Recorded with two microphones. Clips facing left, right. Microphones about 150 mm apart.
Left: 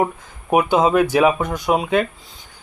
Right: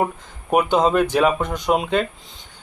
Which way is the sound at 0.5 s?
5° left (ahead or behind).